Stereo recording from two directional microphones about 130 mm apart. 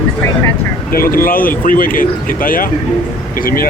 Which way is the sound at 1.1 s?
90° left.